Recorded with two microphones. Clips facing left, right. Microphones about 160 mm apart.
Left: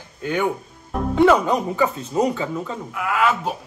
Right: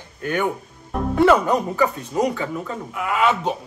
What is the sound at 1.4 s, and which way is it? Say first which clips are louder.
Speech: even; 20° left (ahead or behind).